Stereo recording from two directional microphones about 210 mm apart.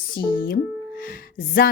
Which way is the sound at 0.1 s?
45° left (ahead or behind).